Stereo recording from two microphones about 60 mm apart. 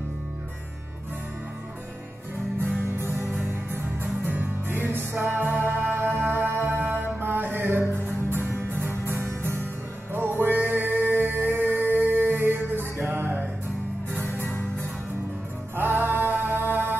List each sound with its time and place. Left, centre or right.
4.0 s music: right
14.2 s music: left
15.7 s music: right